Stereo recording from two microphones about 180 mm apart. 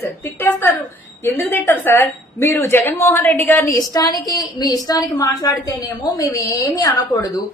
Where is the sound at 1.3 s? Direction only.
10° left (ahead or behind).